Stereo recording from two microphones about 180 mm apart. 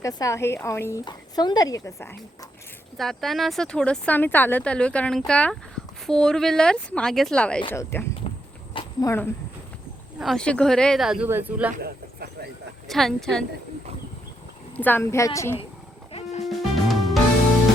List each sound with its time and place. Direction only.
0.0 s a woman's voice: 20° left (ahead or behind)
3.0 s a woman's voice: centre (ahead or behind)
8.2 s walk: 35° left (ahead or behind)
8.7 s a sound: 20° left (ahead or behind)
10.2 s speech: centre (ahead or behind)
11.7 s a sound: 60° right (ahead or behind)
12.9 s speech: centre (ahead or behind)
14.8 s a woman's voice: 10° left (ahead or behind)
16.4 s music: centre (ahead or behind)